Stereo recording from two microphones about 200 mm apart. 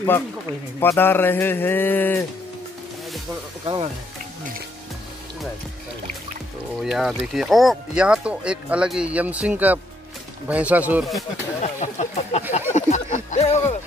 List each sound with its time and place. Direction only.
0.7 s speech: 10° left (ahead or behind)
3.6 s speech: 25° right (ahead or behind)
6.8 s speech: centre (ahead or behind)
11.6 s speech: 35° left (ahead or behind)